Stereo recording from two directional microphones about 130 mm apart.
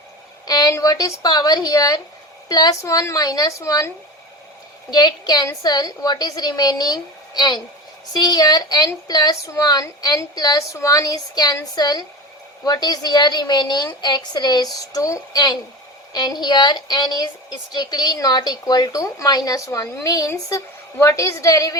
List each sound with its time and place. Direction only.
0.4 s a woman's voice: 30° left (ahead or behind)